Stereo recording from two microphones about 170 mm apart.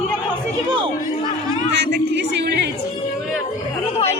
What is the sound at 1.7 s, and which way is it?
Music, 90° right.